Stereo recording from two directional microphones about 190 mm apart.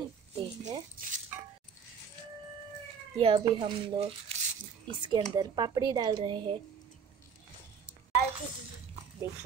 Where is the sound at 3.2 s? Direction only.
25° right (ahead or behind).